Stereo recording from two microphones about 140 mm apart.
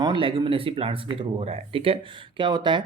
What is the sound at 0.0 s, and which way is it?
Speech, 35° right (ahead or behind).